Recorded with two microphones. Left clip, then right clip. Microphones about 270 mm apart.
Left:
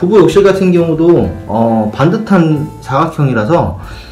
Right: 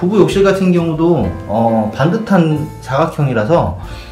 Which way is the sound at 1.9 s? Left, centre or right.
Centre.